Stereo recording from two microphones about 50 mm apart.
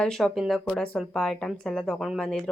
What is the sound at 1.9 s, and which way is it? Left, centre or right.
Speech, centre.